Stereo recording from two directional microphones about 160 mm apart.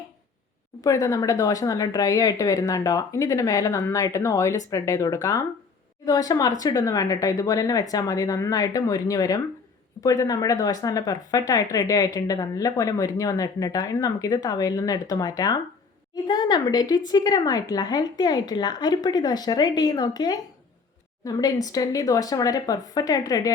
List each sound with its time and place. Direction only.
0.9 s speech: 20° left (ahead or behind)